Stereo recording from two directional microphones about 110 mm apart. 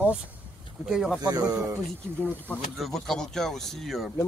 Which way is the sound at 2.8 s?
Centre (ahead or behind).